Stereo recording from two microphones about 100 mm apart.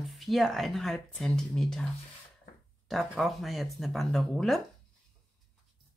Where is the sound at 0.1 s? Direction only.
Centre (ahead or behind).